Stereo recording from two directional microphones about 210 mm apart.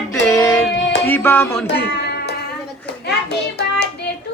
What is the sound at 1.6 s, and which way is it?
Music, 50° left (ahead or behind).